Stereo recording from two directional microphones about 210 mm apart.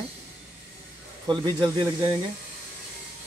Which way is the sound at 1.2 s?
20° right (ahead or behind).